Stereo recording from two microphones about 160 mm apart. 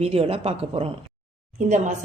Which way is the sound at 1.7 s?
50° right (ahead or behind).